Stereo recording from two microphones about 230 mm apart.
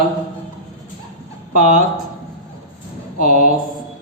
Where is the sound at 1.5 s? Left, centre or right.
Right.